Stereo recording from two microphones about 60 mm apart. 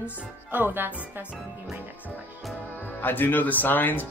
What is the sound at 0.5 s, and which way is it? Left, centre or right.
Speech, right.